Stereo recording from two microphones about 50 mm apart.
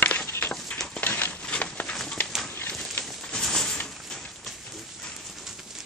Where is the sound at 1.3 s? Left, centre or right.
Centre.